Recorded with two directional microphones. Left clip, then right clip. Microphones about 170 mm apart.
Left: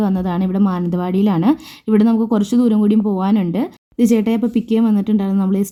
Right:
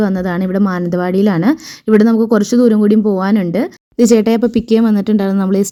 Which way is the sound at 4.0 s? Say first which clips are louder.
Right 6 dB; 35° right (ahead or behind).